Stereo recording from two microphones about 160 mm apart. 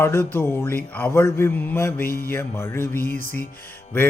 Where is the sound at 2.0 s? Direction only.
65° left (ahead or behind).